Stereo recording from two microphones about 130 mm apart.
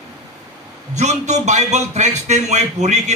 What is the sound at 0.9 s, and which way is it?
A man's voice, 60° right (ahead or behind).